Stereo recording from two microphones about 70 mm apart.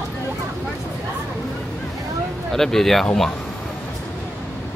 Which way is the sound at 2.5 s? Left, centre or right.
Centre.